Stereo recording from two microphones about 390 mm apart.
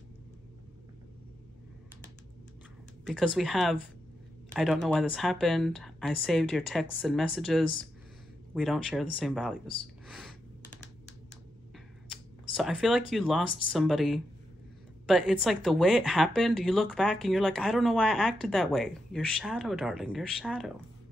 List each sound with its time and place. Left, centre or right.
3.3 s speech: centre
10.0 s a sound: centre
12.5 s speech: centre